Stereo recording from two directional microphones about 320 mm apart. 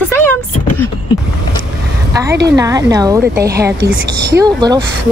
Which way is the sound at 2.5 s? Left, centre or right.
Centre.